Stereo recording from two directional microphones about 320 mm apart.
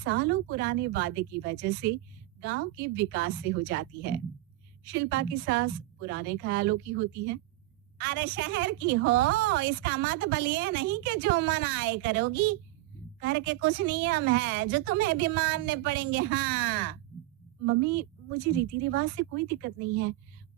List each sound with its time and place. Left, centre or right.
0.0 s a woman's voice: right